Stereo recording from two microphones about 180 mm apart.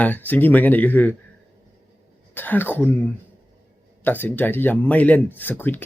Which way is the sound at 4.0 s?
10° left (ahead or behind).